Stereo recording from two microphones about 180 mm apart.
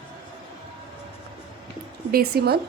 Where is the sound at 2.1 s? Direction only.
60° right (ahead or behind).